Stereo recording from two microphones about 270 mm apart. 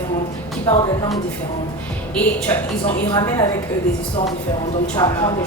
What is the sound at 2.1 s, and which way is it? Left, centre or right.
A woman's voice, centre.